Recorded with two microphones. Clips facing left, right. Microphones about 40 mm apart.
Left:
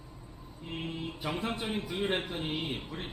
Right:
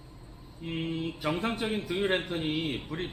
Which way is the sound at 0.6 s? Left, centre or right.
Right.